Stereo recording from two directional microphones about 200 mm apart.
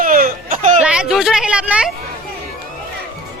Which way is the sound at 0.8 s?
5° right (ahead or behind).